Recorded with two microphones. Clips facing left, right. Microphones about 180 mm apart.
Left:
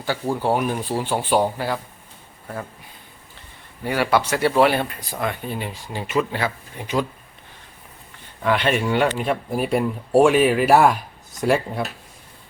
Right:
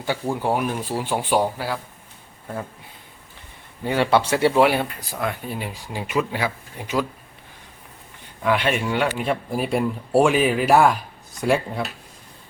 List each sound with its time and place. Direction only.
0.3 s speech: centre (ahead or behind)
3.8 s speech: 25° right (ahead or behind)
4.6 s speech: 10° right (ahead or behind)
8.4 s speech: 5° right (ahead or behind)